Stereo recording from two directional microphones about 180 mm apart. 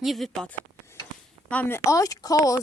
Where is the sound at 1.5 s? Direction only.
10° left (ahead or behind).